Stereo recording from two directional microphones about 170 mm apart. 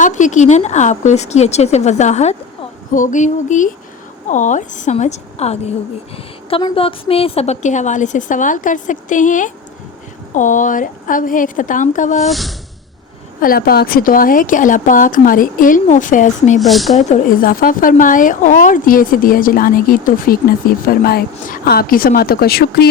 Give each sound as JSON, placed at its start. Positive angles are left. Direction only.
{"t": 0.0, "sound": "speech", "side_deg": 45}
{"t": 6.5, "sound": "speech", "side_deg": 30}
{"t": 12.2, "sound": "speech", "side_deg": 0}
{"t": 13.4, "sound": "speech", "side_deg": 60}
{"t": 16.6, "sound": "speech", "side_deg": 0}
{"t": 16.9, "sound": "speech", "side_deg": 50}